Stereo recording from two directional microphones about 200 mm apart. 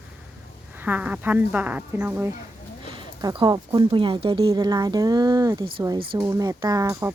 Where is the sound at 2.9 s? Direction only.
25° right (ahead or behind).